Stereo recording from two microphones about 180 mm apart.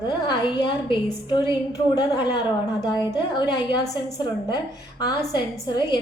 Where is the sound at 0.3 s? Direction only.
25° left (ahead or behind).